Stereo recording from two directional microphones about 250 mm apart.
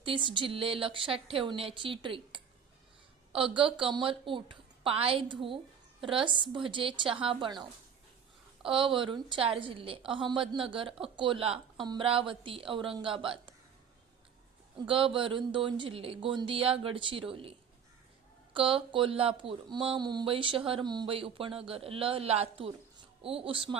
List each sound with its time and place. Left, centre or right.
0.0 s speech: centre
8.6 s speech: centre
14.8 s speech: right
18.5 s speech: right